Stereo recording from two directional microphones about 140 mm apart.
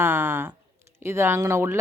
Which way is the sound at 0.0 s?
15° right (ahead or behind).